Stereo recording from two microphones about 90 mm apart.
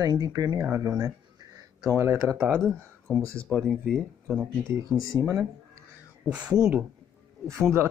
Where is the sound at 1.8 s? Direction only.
30° right (ahead or behind).